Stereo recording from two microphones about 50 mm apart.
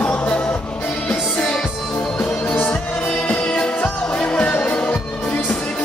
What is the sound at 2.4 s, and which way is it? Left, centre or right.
Music, left.